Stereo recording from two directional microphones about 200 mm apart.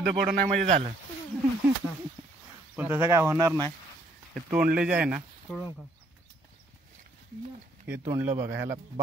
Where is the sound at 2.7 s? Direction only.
10° right (ahead or behind).